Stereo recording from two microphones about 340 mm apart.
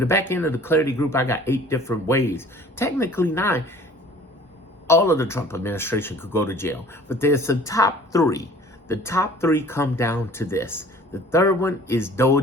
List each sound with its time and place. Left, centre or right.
0.0 s speech: centre
4.9 s speech: centre